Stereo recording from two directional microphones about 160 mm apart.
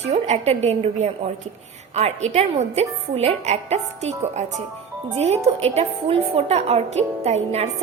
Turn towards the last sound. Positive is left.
turn(degrees=-40)  # may be behind; listen again after turning